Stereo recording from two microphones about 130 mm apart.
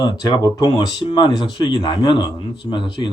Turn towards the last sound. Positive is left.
turn(degrees=40)  # may be behind; listen again after turning